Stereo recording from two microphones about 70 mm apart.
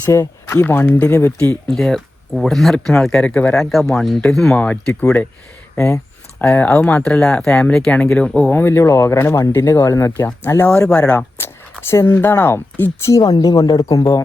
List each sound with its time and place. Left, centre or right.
0.1 s speech: left
0.6 s speech: left
1.6 s speech: centre
4.5 s speech: centre
5.7 s speech: left
6.4 s speech: centre
8.5 s speech: left
9.6 s speech: left
10.4 s speech: left
10.8 s speech: centre
11.3 s speech: left
13.1 s speech: left
13.7 s speech: left